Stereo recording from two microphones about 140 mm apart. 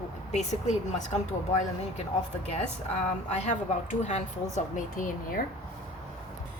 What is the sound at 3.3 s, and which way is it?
Speech, 55° left (ahead or behind).